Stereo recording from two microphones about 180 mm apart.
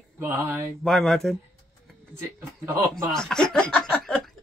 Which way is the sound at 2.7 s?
15° right (ahead or behind).